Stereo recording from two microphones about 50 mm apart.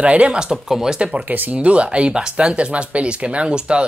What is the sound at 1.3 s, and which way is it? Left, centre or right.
Speech, right.